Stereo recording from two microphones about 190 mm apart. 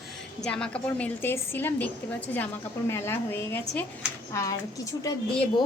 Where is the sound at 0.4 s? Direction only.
5° left (ahead or behind); by 5.6 s 20° left (ahead or behind).